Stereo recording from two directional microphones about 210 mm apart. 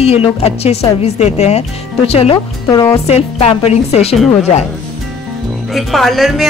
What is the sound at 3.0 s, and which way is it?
Speech, 30° left (ahead or behind).